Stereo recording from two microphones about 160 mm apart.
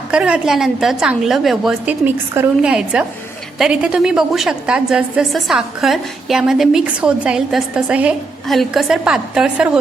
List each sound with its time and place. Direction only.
0.1 s a woman's voice: 5° right (ahead or behind)